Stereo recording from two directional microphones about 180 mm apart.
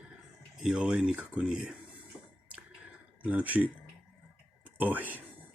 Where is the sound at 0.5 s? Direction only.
5° right (ahead or behind).